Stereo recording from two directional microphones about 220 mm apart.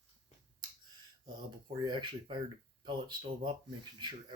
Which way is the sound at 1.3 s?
20° right (ahead or behind).